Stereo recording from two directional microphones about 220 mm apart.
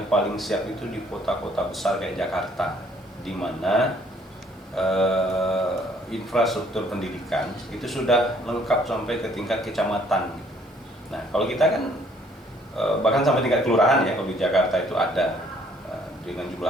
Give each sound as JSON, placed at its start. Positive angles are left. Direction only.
{"t": 0.1, "sound": "a man's voice", "side_deg": 0}
{"t": 12.7, "sound": "speech", "side_deg": 0}